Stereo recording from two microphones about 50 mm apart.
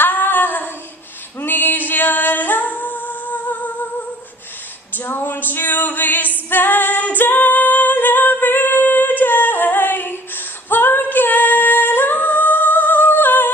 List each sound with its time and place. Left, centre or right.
0.0 s female singing: left
1.4 s singing: left
4.9 s a sound: left
6.5 s female singing: left